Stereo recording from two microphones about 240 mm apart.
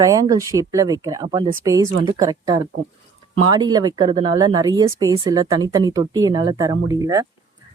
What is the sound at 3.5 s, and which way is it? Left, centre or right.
Speech, centre.